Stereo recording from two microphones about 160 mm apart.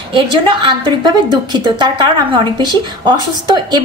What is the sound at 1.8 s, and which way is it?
A woman's voice, 30° right (ahead or behind).